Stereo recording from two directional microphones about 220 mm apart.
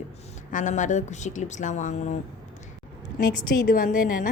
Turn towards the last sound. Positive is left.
turn(degrees=40)  # may be behind; listen again after turning